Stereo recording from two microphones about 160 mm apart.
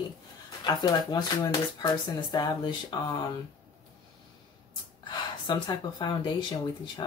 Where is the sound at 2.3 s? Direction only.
25° left (ahead or behind).